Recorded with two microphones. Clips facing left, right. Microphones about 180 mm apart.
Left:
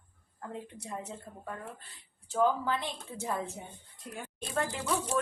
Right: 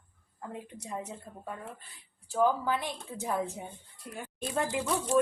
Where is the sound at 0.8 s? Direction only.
15° right (ahead or behind).